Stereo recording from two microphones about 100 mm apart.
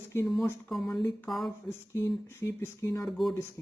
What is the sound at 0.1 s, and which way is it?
Speech, 25° left (ahead or behind).